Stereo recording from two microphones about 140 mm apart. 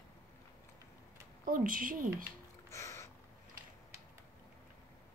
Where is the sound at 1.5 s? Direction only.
80° right.